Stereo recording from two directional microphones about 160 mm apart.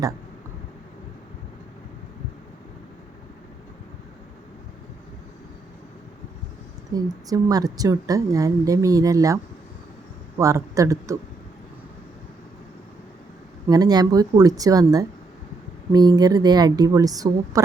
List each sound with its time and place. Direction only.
6.9 s a woman's voice: 20° right (ahead or behind)
13.7 s a woman's voice: 25° right (ahead or behind)